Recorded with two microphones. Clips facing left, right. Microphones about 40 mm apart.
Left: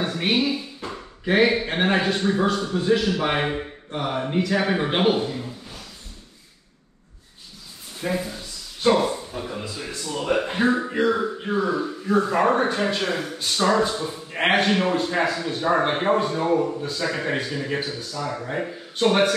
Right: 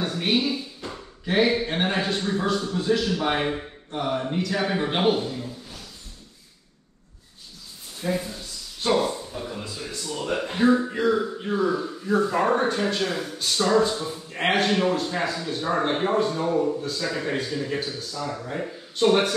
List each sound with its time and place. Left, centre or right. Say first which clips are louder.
0.0 s speech: left 2 dB; left
8.1 s speech: even; centre